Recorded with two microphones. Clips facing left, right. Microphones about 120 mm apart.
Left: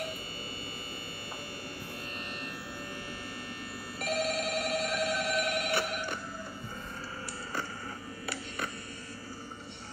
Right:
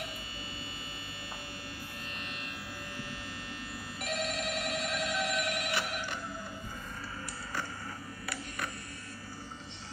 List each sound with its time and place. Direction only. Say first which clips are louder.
4.0 s telephone bell ringing: left 4 dB; 45° left (ahead or behind)